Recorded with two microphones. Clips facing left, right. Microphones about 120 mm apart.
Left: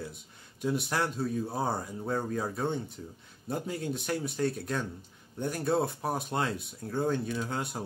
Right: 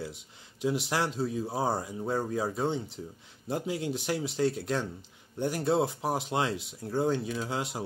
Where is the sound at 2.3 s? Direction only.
20° right (ahead or behind).